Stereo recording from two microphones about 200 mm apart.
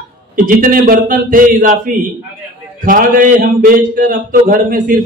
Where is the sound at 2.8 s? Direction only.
45° right (ahead or behind).